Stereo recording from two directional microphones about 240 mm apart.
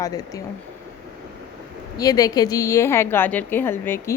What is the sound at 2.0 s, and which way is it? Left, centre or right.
A woman's voice, centre.